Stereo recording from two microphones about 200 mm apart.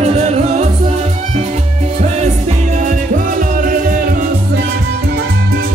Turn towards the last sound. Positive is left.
turn(degrees=-40)  # may be behind; listen again after turning